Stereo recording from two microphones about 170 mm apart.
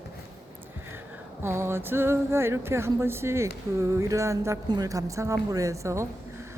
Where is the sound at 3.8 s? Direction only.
15° right (ahead or behind).